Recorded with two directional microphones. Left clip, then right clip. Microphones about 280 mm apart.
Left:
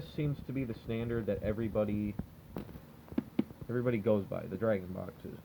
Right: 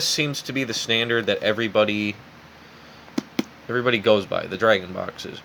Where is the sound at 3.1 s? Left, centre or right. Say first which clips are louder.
Right 9 dB; centre.